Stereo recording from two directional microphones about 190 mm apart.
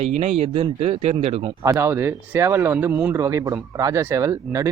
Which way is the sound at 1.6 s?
15° right (ahead or behind).